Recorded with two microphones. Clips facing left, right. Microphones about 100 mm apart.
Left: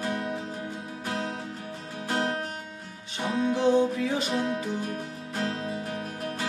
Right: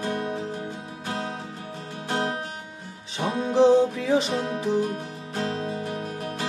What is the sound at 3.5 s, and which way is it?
Music, 90° right.